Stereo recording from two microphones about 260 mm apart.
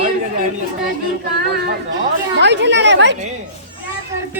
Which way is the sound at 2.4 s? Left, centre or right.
Right.